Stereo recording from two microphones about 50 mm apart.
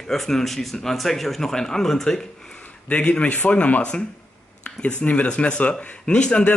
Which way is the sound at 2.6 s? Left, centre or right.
Left.